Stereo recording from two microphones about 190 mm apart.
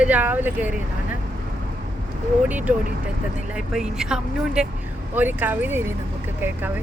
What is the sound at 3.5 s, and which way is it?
Speech, 5° right (ahead or behind).